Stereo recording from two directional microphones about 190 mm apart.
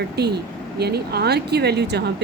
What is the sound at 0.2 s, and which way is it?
Speech, 60° right (ahead or behind).